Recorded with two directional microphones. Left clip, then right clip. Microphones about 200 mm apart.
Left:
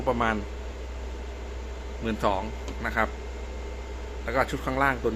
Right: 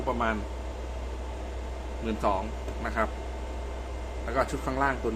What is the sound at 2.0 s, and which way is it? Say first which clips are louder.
Speech: left 2 dB; 15° left (ahead or behind).